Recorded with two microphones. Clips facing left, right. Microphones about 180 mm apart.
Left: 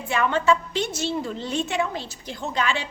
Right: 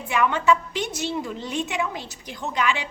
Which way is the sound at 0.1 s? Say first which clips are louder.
Even; 15° right (ahead or behind).